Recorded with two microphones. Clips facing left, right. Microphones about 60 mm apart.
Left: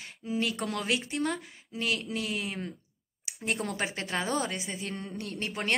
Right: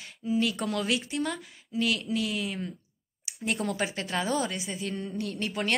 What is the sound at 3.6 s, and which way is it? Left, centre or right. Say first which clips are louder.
A woman's voice: right 2 dB; left.